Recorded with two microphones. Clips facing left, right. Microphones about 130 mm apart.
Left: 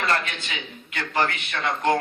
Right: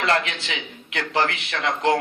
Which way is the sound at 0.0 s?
75° right (ahead or behind).